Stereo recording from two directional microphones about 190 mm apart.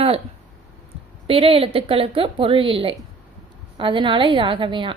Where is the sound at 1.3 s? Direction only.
30° right (ahead or behind).